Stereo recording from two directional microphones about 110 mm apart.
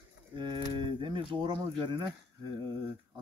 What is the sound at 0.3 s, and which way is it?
Speech, 45° right (ahead or behind).